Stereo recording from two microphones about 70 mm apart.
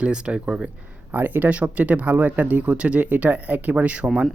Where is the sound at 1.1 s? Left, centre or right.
Right.